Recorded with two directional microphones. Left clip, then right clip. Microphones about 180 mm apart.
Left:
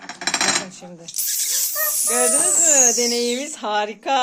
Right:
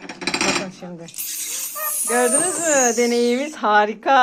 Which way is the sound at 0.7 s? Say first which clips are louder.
Right 3 dB; 10° left (ahead or behind).